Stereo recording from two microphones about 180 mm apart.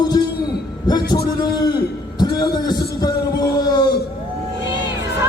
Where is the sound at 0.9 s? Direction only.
25° left (ahead or behind).